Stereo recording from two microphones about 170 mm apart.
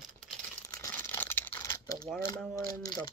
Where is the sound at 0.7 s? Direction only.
15° left (ahead or behind).